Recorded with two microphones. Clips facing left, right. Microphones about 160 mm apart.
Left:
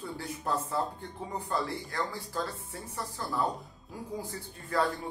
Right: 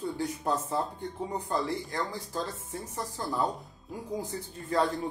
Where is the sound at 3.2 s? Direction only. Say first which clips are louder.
Right 1 dB; 20° right (ahead or behind).